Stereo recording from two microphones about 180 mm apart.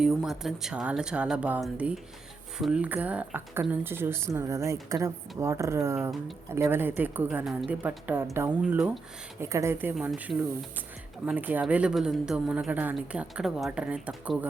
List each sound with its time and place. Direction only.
0.0 s speech: centre (ahead or behind)